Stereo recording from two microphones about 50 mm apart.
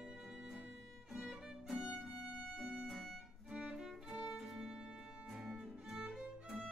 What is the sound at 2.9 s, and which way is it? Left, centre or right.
Music, centre.